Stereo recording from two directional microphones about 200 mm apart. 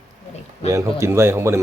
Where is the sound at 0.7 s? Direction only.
15° right (ahead or behind).